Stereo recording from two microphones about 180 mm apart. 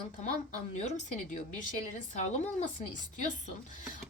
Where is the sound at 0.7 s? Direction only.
40° left (ahead or behind).